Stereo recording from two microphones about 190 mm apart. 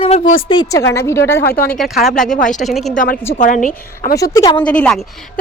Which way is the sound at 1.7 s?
Centre (ahead or behind).